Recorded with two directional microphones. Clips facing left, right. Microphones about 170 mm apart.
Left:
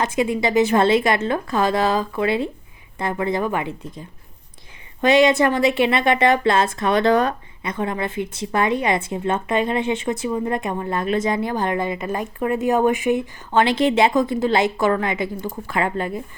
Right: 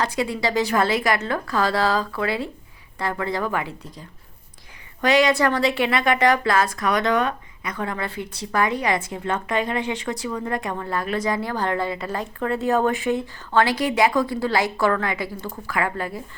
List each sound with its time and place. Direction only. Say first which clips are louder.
0.0 s a woman's voice: left 3 dB; 20° left (ahead or behind)